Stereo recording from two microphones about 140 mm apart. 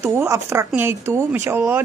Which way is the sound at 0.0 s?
20° right (ahead or behind).